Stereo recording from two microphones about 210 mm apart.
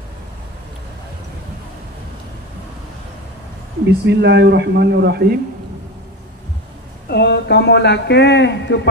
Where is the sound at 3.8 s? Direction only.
55° right (ahead or behind).